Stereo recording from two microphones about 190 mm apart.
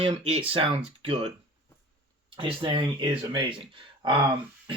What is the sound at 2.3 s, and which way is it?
Speech, 25° right (ahead or behind).